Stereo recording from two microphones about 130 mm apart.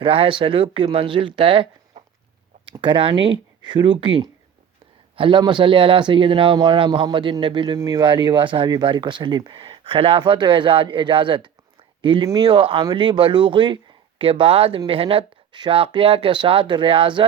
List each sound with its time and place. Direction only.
0.0 s speech: 45° right (ahead or behind); by 12.5 s 30° right (ahead or behind)
12.5 s speech: 40° right (ahead or behind)